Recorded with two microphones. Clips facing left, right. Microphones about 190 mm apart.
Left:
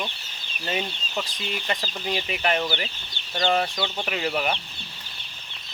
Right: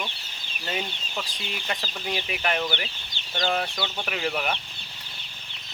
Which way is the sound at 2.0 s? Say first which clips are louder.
Left 3 dB; centre (ahead or behind).